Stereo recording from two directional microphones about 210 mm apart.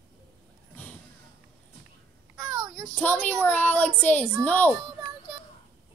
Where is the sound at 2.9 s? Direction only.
5° left (ahead or behind).